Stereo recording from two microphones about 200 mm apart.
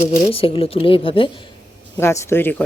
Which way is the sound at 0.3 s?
30° left (ahead or behind).